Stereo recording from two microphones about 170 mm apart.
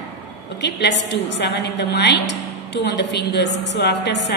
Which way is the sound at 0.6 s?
85° left.